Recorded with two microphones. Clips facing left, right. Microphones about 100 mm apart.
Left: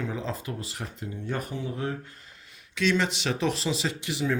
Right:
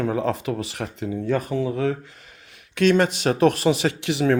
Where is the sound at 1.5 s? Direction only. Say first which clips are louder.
Right 9 dB; 90° right.